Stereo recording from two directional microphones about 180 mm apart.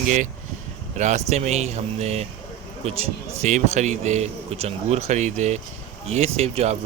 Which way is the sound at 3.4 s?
40° right (ahead or behind).